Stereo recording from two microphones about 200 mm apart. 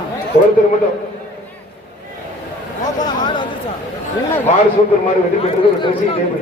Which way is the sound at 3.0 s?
20° left (ahead or behind).